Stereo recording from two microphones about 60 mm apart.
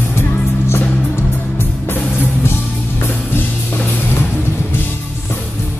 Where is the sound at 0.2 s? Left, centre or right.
Left.